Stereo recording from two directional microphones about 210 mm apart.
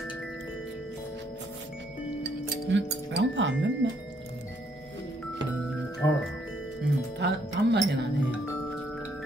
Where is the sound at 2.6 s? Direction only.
60° right (ahead or behind).